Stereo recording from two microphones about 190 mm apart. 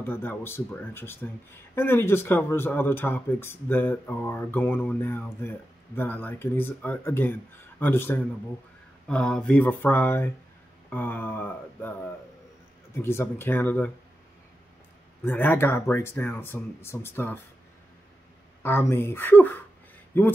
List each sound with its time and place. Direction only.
0.0 s speech: 10° left (ahead or behind)
15.2 s speech: 10° left (ahead or behind)
18.6 s speech: 10° left (ahead or behind)